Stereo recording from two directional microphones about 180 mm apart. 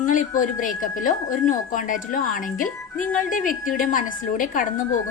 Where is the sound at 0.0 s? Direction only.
45° left (ahead or behind).